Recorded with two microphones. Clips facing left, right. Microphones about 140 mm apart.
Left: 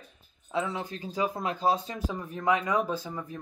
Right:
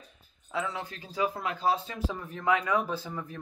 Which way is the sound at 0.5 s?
25° left (ahead or behind).